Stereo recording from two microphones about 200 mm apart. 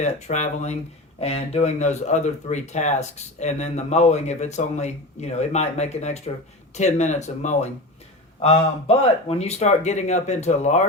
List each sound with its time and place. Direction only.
0.0 s speech: 35° left (ahead or behind)